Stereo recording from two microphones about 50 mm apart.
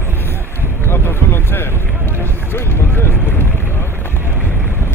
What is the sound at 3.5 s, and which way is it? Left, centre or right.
Boat, left.